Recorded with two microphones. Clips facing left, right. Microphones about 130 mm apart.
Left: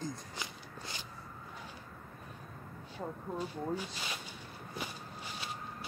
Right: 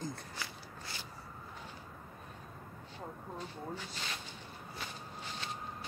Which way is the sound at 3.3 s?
10° left (ahead or behind).